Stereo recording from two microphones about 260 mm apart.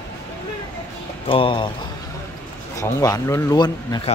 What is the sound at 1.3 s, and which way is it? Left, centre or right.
Speech, centre.